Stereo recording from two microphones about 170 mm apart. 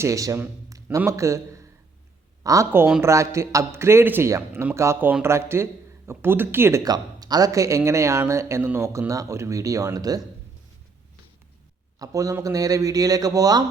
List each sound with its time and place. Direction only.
0.0 s speech: 20° right (ahead or behind)
11.9 s a man's voice: 20° right (ahead or behind)